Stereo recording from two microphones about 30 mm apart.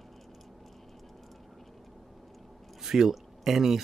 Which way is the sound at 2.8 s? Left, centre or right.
Centre.